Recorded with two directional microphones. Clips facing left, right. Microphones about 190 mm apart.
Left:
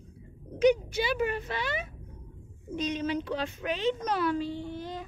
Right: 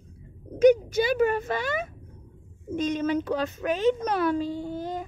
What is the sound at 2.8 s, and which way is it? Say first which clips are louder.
A child's voice: right 5 dB; 50° right (ahead or behind).